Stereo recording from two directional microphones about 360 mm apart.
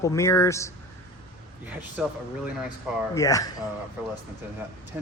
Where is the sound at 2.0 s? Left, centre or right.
Centre.